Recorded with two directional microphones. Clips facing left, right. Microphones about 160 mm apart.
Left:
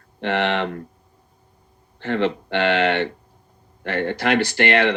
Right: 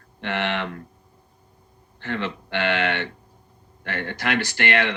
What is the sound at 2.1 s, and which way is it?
Speech, 25° left (ahead or behind).